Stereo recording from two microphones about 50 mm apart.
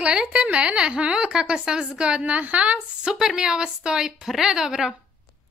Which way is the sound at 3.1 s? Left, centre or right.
Centre.